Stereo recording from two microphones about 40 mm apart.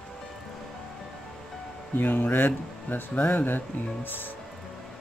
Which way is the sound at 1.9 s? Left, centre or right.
Left.